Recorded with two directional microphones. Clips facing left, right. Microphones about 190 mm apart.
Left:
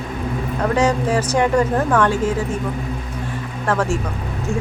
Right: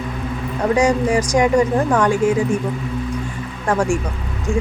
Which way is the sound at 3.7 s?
15° right (ahead or behind).